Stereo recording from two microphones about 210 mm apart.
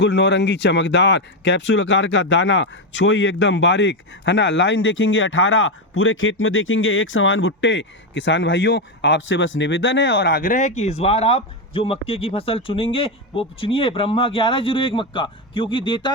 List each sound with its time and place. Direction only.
0.0 s speech: 55° left (ahead or behind)
10.4 s a man's voice: 35° left (ahead or behind)